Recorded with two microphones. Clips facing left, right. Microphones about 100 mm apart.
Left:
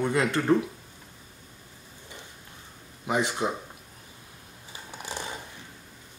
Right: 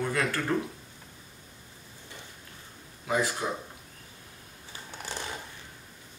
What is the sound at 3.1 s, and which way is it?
Speech, 20° left (ahead or behind).